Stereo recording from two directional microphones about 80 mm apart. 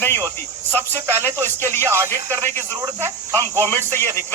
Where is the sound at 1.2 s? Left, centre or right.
Left.